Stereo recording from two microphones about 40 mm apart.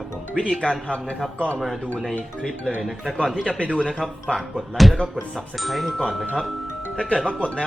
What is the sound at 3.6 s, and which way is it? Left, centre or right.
Speech, left.